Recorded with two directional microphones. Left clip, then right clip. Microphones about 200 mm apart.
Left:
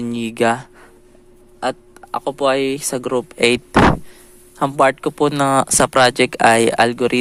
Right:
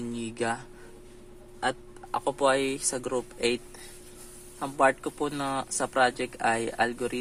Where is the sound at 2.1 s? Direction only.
35° left (ahead or behind).